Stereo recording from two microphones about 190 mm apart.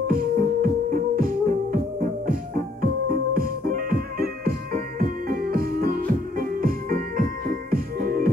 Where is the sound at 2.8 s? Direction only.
50° right (ahead or behind).